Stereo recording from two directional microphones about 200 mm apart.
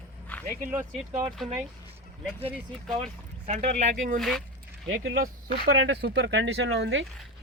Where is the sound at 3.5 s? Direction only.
35° right (ahead or behind).